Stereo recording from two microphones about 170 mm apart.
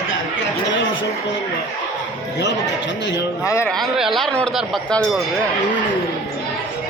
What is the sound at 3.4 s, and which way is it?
Speech, 15° left (ahead or behind).